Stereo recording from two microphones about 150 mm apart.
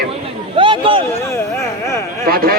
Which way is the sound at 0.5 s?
35° right (ahead or behind).